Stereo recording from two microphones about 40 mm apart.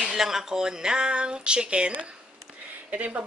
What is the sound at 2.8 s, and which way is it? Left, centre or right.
Speech, right.